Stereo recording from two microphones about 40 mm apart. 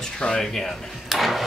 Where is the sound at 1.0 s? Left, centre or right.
Centre.